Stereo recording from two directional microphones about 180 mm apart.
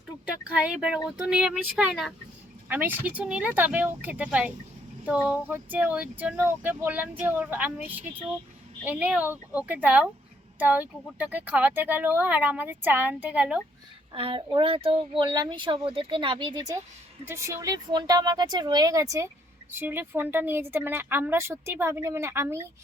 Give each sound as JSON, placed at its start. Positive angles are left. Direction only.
{"t": 0.5, "sound": "speech", "side_deg": -5}
{"t": 14.1, "sound": "speech", "side_deg": -30}